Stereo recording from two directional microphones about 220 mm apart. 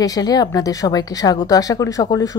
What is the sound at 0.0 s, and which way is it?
Speech, 15° left (ahead or behind).